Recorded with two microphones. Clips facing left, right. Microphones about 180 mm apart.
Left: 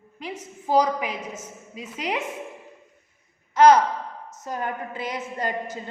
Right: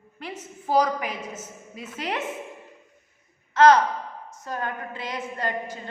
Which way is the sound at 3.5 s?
20° left (ahead or behind).